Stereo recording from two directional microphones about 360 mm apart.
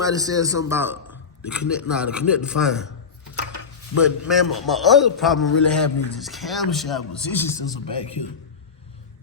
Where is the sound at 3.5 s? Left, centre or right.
Left.